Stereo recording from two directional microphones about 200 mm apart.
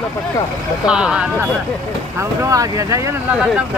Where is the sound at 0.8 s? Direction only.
5° right (ahead or behind).